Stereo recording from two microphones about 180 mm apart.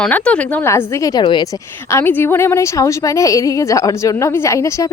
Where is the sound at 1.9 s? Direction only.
10° left (ahead or behind).